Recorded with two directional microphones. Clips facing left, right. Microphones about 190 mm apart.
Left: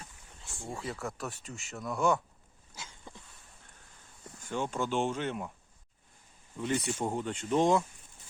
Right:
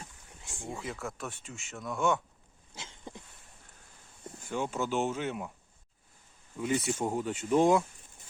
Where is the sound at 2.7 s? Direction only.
25° right (ahead or behind).